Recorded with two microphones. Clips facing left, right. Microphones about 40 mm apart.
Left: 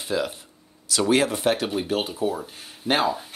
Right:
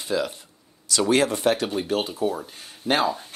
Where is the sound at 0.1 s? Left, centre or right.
Centre.